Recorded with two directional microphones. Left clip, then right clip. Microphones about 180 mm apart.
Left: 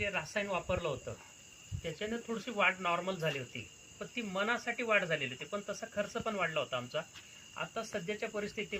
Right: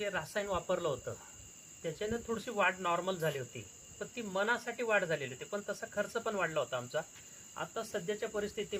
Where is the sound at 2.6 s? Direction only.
20° right (ahead or behind).